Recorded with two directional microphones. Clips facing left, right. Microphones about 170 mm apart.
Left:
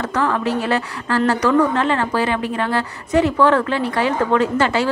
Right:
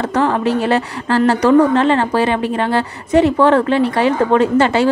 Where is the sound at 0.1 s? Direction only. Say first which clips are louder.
Right 4 dB; 25° right (ahead or behind).